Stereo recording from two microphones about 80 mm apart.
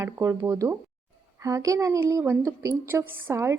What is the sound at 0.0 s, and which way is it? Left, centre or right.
A woman's voice, right.